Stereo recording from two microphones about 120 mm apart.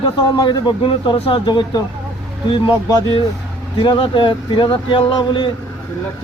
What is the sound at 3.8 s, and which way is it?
Speech, 45° left (ahead or behind).